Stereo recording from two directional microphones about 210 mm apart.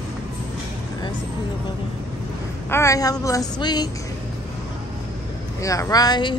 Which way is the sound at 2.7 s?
15° left (ahead or behind).